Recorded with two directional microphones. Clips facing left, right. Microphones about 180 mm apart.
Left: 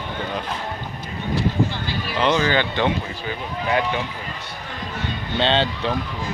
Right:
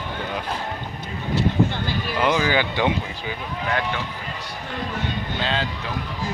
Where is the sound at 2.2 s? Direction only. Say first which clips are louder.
Left 1 dB; 10° right (ahead or behind).